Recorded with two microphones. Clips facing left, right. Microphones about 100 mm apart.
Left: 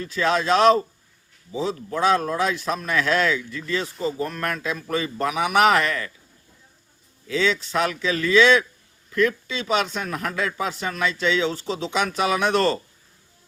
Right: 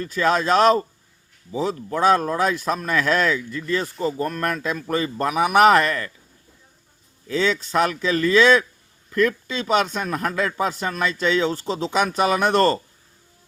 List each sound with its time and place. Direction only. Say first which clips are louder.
0.2 s a man's voice: right 1 dB; 45° right (ahead or behind)
7.3 s a man's voice: right 1 dB; 45° right (ahead or behind)